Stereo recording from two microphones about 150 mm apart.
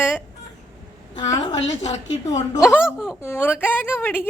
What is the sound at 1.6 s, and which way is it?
Speech, 50° left (ahead or behind).